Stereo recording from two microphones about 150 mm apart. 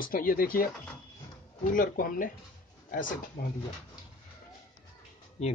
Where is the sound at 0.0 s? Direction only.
70° left (ahead or behind).